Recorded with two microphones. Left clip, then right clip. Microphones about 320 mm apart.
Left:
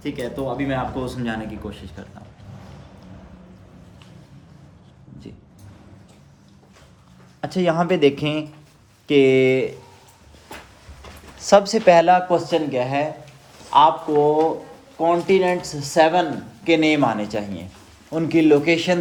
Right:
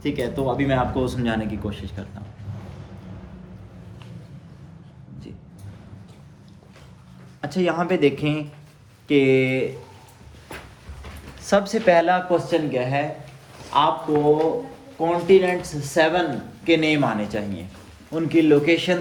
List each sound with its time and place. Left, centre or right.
0.0 s speech: centre
7.4 s speech: left
11.4 s a man's voice: left
14.9 s speech: left